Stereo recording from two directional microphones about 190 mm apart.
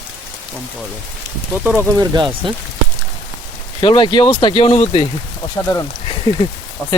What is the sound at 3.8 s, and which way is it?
Speech, 25° left (ahead or behind).